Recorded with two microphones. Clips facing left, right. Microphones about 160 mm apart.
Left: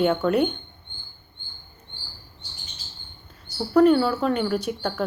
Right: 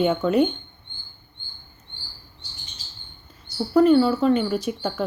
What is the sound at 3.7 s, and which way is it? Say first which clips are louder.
A woman's voice: right 1 dB; centre (ahead or behind).